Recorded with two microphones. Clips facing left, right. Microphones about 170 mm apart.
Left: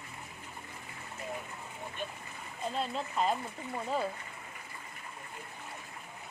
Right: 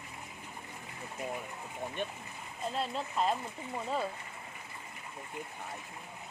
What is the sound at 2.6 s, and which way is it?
Speech, centre (ahead or behind).